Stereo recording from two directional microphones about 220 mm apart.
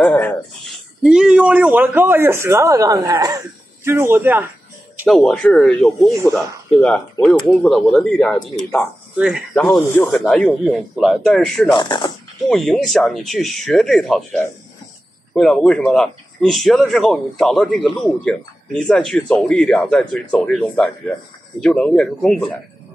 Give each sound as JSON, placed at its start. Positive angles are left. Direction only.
{"t": 0.0, "sound": "speech", "side_deg": 5}
{"t": 4.9, "sound": "speech", "side_deg": 0}
{"t": 11.7, "sound": "speech", "side_deg": 20}
{"t": 12.4, "sound": "speech", "side_deg": 0}